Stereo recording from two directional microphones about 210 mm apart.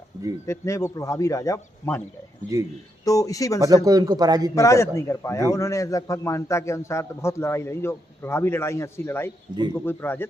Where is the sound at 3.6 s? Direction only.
15° right (ahead or behind).